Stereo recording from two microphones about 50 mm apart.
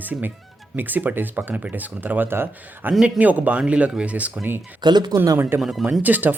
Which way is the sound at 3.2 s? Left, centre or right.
Right.